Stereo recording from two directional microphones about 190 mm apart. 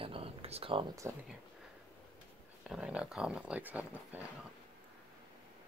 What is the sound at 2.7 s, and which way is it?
Speech, 5° right (ahead or behind).